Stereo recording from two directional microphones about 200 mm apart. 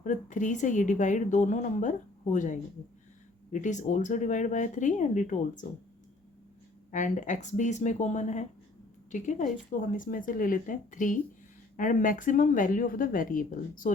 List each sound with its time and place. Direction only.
0.0 s speech: 40° left (ahead or behind)
6.9 s speech: 40° left (ahead or behind)